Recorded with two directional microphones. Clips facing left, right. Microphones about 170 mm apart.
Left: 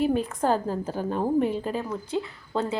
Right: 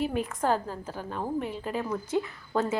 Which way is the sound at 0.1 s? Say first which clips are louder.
Left 4 dB; 30° left (ahead or behind).